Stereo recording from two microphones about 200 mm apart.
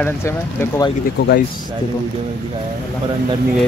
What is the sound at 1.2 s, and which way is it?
Speech, 55° left (ahead or behind).